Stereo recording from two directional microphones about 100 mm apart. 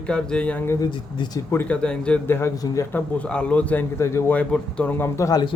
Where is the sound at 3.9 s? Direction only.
30° left (ahead or behind).